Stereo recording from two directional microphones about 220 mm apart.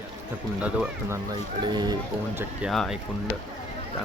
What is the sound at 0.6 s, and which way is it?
Speech, 10° right (ahead or behind).